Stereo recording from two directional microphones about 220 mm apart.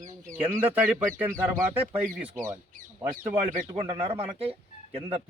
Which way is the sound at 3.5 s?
25° right (ahead or behind).